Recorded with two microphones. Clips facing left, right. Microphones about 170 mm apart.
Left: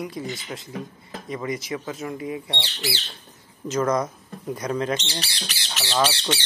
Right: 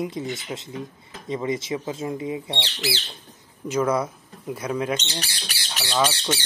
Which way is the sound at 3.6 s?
10° right (ahead or behind).